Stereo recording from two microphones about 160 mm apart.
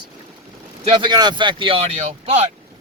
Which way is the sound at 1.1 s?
25° right (ahead or behind).